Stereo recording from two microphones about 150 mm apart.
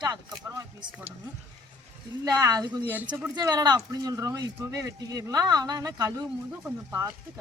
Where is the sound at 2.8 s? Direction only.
10° right (ahead or behind).